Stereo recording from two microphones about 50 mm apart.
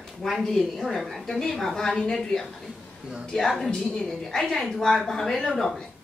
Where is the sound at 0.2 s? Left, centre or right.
Centre.